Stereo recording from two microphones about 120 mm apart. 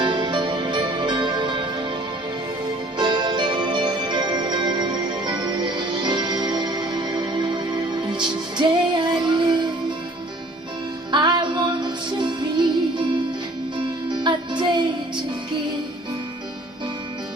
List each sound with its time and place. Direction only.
0.0 s music: 40° right (ahead or behind)
3.0 s music: 40° right (ahead or behind)
11.1 s music: 40° right (ahead or behind)
14.0 s music: 40° right (ahead or behind)